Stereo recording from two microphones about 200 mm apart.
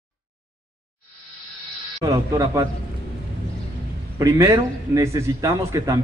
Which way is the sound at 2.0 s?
15° right (ahead or behind).